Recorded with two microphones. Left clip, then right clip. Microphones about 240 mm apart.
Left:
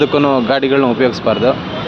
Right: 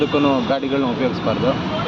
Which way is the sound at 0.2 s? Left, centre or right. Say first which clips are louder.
Left 5 dB; left.